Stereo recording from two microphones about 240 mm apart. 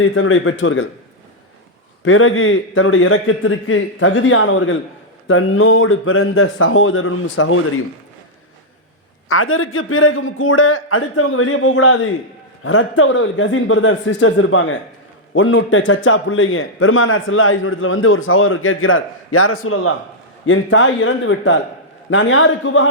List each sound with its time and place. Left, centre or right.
0.0 s a man's voice: left
2.0 s a man's voice: left
9.3 s a man's voice: left